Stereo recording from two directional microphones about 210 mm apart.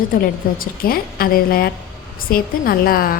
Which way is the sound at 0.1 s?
40° left (ahead or behind).